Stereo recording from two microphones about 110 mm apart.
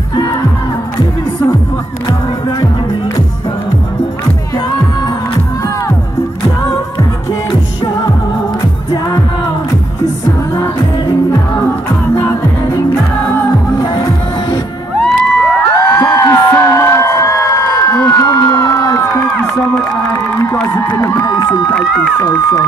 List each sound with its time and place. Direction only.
15.0 s music: 15° left (ahead or behind)
21.0 s a sound: 35° left (ahead or behind)
22.2 s speech: 35° left (ahead or behind)